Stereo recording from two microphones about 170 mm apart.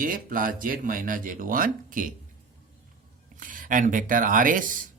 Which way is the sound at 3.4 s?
50° right (ahead or behind).